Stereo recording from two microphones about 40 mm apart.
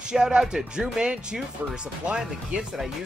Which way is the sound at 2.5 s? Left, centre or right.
Right.